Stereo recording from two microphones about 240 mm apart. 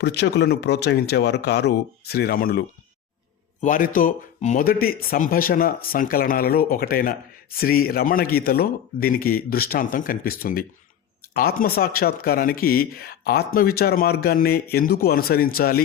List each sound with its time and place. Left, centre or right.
0.0 s speech: left